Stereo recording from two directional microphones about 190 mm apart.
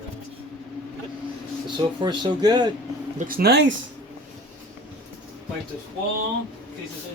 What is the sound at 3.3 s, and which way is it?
Speech, 55° right (ahead or behind).